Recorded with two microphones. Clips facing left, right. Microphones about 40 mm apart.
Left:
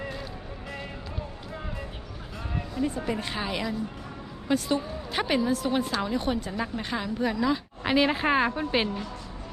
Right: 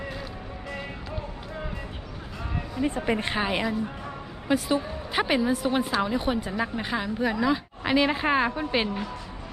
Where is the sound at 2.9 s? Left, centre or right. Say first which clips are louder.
Right 4 dB; right.